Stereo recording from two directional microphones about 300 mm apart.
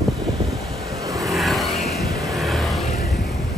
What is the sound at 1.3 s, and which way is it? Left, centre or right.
Vehicle, centre.